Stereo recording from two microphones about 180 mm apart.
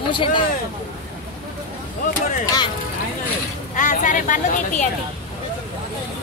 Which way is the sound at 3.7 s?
45° left (ahead or behind).